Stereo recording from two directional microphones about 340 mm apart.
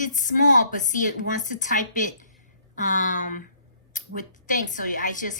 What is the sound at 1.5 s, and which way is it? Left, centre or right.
A woman's voice, left.